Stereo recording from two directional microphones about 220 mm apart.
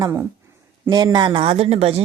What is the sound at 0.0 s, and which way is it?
Speech, 15° right (ahead or behind).